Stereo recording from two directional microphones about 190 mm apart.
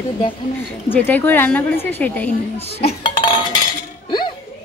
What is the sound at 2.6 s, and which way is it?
Dishes, 30° left (ahead or behind).